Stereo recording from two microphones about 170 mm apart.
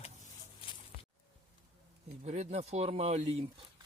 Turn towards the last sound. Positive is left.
turn(degrees=-40)  # may be behind; listen again after turning